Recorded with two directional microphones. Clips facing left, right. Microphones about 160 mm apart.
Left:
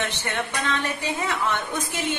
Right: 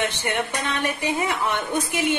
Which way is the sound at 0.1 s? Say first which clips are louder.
Right 3 dB; 15° right (ahead or behind).